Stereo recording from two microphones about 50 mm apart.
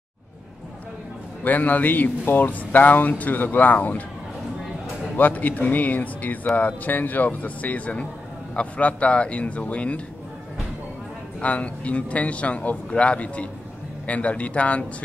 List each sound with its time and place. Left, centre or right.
1.4 s speech: left
5.1 s a man's voice: left
11.4 s a man's voice: left